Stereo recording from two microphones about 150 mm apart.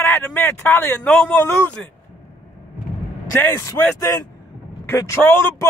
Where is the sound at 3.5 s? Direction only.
20° left (ahead or behind).